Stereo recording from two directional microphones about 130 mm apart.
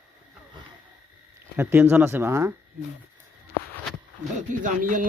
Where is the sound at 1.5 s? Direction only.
15° right (ahead or behind).